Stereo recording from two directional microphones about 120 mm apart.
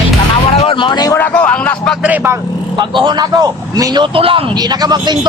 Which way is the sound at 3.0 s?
40° right (ahead or behind).